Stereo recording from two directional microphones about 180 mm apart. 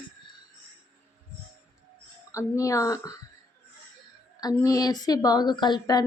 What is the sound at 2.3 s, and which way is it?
Speech, 20° left (ahead or behind).